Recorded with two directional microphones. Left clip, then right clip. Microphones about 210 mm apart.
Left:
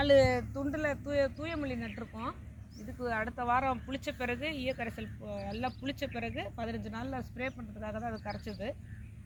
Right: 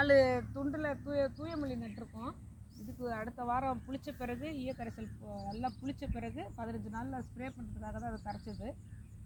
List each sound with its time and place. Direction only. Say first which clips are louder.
0.0 s speech: left 2 dB; centre (ahead or behind)
1.4 s speech: left 3 dB; 5° right (ahead or behind); by 8.4 s 40° left (ahead or behind)
8.4 s speech: left 6 dB; 20° left (ahead or behind)